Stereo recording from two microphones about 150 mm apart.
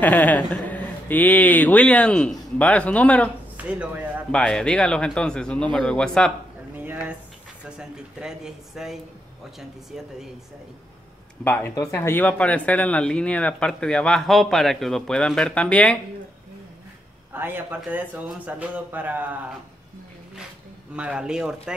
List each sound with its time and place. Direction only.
0.0 s speech: 10° left (ahead or behind)
3.5 s speech: 10° right (ahead or behind)
4.3 s speech: 5° left (ahead or behind)
6.8 s a sound: 10° right (ahead or behind)
7.7 s speech: 5° right (ahead or behind)
11.4 s speech: 10° left (ahead or behind)
17.3 s a man's voice: 15° right (ahead or behind)
20.9 s speech: 5° right (ahead or behind)